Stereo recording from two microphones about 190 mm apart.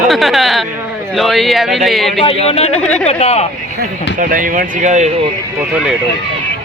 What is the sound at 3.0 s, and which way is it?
Speech, 35° left (ahead or behind).